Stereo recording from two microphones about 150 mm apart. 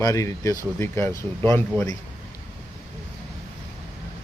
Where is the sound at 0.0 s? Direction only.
20° left (ahead or behind).